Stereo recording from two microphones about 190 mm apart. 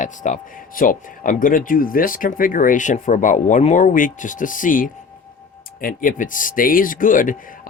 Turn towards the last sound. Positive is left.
turn(degrees=45)  # may be behind; listen again after turning